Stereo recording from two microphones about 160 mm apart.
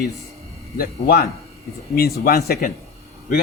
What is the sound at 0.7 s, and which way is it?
Speech, 65° left (ahead or behind).